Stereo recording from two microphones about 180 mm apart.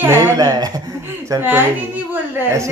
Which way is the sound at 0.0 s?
15° right (ahead or behind).